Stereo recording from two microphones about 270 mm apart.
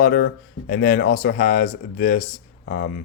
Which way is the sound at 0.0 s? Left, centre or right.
Left.